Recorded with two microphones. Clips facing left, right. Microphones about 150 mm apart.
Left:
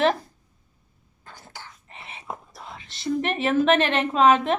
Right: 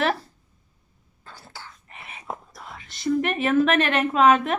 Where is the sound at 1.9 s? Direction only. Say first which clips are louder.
Left 2 dB; 30° left (ahead or behind).